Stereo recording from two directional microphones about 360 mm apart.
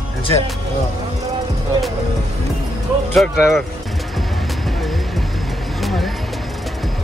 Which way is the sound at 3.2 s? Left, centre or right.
Centre.